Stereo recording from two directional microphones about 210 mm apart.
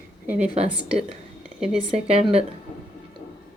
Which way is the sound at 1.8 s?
30° right (ahead or behind).